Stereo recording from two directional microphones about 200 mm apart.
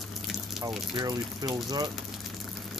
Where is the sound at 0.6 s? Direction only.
20° right (ahead or behind).